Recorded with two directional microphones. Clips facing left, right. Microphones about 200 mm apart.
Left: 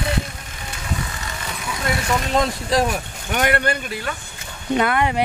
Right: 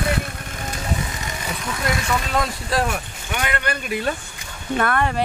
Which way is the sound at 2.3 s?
20° left (ahead or behind).